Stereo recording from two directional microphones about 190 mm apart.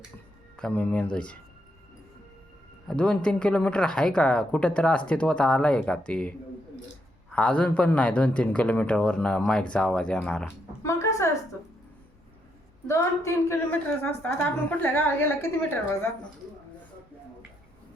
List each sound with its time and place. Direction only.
0.5 s speech: 5° left (ahead or behind)
2.8 s speech: 5° left (ahead or behind)
7.3 s speech: 5° left (ahead or behind)
10.8 s a sound: 15° left (ahead or behind)
12.9 s speech: 15° left (ahead or behind)